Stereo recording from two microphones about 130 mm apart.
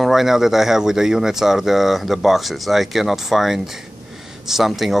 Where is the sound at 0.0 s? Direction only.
Centre (ahead or behind).